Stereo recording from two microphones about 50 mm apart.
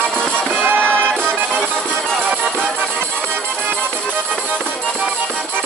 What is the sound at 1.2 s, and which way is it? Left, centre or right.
Music, centre.